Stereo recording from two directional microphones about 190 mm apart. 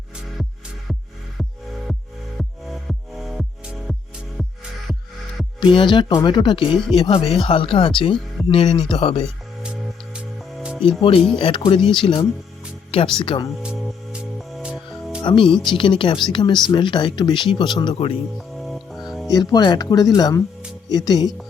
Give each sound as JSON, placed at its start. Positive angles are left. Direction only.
{"t": 2.4, "sound": "music", "side_deg": 0}
{"t": 5.5, "sound": "speech", "side_deg": 25}
{"t": 9.2, "sound": "music", "side_deg": -5}
{"t": 11.3, "sound": "speech", "side_deg": 30}
{"t": 13.6, "sound": "music", "side_deg": 0}
{"t": 15.2, "sound": "speech", "side_deg": 25}
{"t": 18.3, "sound": "music", "side_deg": 0}
{"t": 19.3, "sound": "speech", "side_deg": 20}